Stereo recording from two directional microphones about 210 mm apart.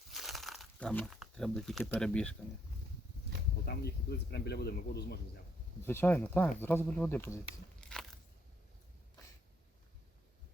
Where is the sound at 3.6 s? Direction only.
50° left (ahead or behind).